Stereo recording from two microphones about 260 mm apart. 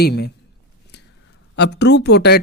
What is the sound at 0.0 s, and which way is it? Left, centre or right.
Speech, left.